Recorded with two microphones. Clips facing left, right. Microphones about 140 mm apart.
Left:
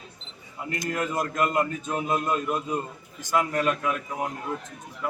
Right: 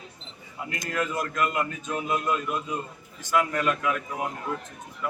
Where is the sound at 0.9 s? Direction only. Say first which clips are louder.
Even; 40° left (ahead or behind).